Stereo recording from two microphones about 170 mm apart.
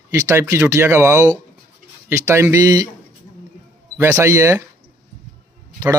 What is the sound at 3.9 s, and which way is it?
Speech, 15° right (ahead or behind).